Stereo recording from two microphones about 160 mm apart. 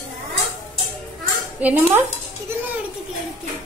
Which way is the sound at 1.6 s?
10° right (ahead or behind).